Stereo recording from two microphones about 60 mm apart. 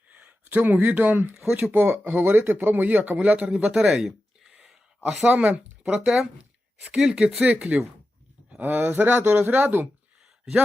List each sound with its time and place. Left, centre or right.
0.1 s speech: right
3.8 s a sound: centre
5.2 s speech: right